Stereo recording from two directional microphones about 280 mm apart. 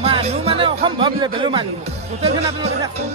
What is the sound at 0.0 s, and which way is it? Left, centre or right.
Music, right.